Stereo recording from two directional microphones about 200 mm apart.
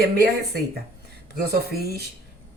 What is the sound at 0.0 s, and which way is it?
Speech, 50° right (ahead or behind).